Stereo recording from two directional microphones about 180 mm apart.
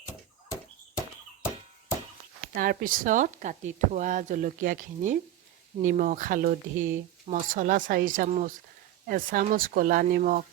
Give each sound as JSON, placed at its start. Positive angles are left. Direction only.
{"t": 2.6, "sound": "speech", "side_deg": -50}